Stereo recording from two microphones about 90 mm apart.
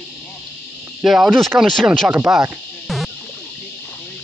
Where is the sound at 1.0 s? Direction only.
5° right (ahead or behind).